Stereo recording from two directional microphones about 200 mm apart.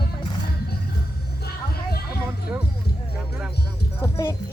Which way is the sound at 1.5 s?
50° left (ahead or behind).